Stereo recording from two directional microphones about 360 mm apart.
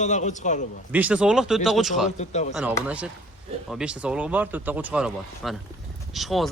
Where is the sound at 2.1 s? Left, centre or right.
Centre.